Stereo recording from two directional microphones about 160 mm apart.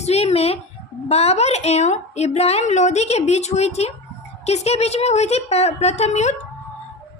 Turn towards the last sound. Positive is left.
turn(degrees=45)  # may be behind; listen again after turning